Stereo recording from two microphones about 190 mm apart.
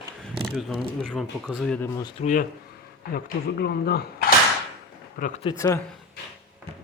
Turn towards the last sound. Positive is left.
turn(degrees=15)  # may be behind; listen again after turning